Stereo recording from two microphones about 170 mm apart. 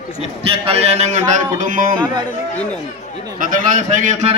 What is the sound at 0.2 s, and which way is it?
A man's voice, 35° right (ahead or behind).